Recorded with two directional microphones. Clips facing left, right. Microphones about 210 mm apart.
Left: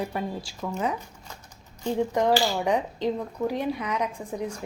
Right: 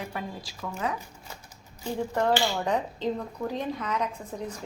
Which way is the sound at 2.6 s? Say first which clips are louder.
Left 3 dB; 15° left (ahead or behind).